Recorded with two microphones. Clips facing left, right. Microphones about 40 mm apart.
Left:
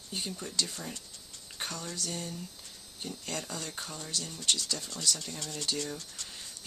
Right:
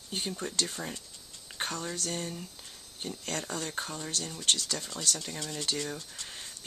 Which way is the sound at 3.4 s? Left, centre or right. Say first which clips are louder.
Right 4 dB; right.